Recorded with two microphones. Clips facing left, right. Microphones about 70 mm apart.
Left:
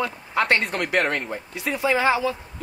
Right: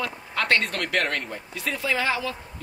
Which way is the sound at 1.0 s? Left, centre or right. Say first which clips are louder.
Left 3 dB; centre.